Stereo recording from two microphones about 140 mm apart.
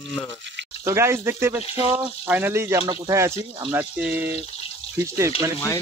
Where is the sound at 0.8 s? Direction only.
20° right (ahead or behind).